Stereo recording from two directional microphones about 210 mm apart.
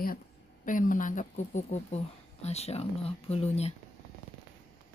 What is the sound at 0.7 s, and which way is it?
A woman's voice, 40° left (ahead or behind).